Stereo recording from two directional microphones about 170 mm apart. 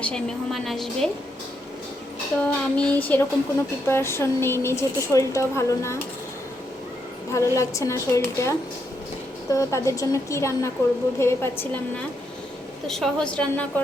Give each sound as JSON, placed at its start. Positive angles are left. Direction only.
{"t": 0.0, "sound": "a woman's voice", "side_deg": 5}
{"t": 2.4, "sound": "a woman's voice", "side_deg": 10}
{"t": 7.3, "sound": "a woman's voice", "side_deg": 15}
{"t": 12.9, "sound": "a woman's voice", "side_deg": 5}